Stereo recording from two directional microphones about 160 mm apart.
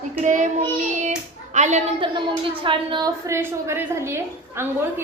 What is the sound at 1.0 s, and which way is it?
Hands, 45° right (ahead or behind).